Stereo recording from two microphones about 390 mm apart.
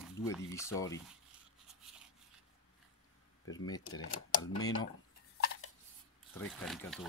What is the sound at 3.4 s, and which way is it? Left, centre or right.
Speech, left.